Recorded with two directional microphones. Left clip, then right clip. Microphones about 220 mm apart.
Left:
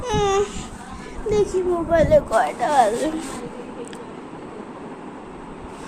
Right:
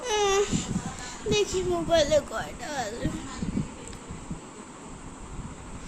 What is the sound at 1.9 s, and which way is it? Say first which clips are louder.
Speech: left 7 dB; 15° right (ahead or behind).